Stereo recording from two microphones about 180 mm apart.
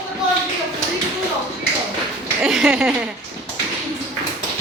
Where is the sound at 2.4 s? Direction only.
Centre (ahead or behind).